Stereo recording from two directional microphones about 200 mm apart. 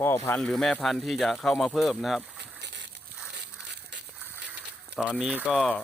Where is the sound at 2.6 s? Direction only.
60° right (ahead or behind).